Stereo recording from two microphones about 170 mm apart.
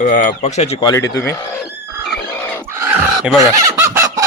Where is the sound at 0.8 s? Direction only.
20° left (ahead or behind).